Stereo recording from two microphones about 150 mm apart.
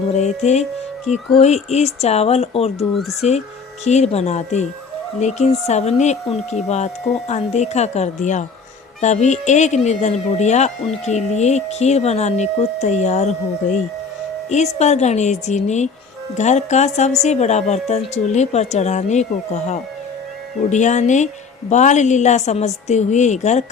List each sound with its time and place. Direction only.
0.1 s speech: 50° left (ahead or behind)
3.0 s speech: centre (ahead or behind)
3.8 s speech: 45° left (ahead or behind)